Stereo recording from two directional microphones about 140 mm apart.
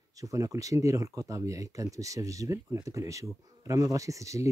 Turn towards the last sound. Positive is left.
turn(degrees=-20)  # may be behind; listen again after turning